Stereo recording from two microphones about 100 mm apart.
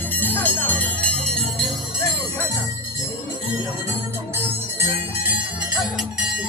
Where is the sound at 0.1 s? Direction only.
20° left (ahead or behind).